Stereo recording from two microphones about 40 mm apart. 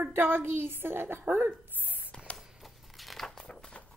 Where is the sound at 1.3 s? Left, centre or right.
Right.